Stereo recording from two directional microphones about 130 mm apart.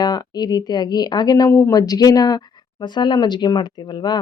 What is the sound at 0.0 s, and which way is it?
Speech, 30° left (ahead or behind).